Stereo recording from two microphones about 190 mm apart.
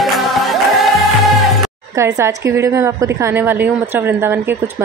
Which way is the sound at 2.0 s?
15° right (ahead or behind).